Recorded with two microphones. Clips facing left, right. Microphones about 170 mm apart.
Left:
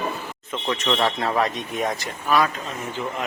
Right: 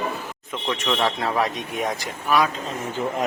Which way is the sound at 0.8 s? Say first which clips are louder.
Even; 5° right (ahead or behind).